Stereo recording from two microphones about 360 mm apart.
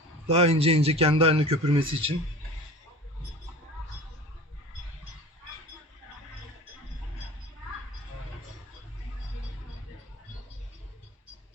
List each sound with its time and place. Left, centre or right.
0.3 s a man's voice: centre